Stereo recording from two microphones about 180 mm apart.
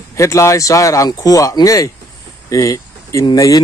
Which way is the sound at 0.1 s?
15° left (ahead or behind).